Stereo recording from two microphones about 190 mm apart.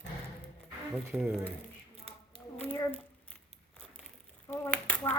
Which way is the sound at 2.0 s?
30° right (ahead or behind).